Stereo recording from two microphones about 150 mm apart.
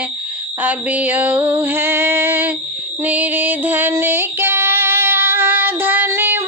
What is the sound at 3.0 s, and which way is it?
Music, 10° right (ahead or behind).